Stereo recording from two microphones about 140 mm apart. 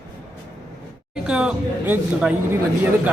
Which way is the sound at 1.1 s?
5° right (ahead or behind).